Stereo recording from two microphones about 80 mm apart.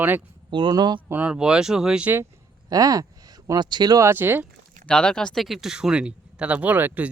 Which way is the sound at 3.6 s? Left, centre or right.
Right.